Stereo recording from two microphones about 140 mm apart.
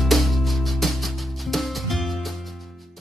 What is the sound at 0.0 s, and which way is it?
Music, centre (ahead or behind).